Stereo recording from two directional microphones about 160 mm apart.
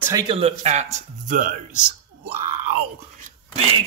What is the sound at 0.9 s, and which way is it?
Speech, 55° right (ahead or behind).